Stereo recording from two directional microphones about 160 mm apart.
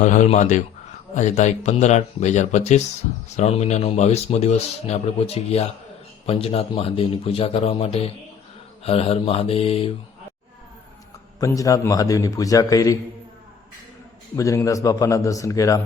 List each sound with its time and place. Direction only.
0.0 s a man's voice: 50° left (ahead or behind)
11.3 s a man's voice: 20° left (ahead or behind)
14.3 s a man's voice: 20° left (ahead or behind)